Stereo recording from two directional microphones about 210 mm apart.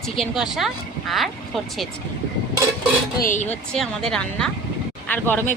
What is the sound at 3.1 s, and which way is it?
Speech, 40° left (ahead or behind).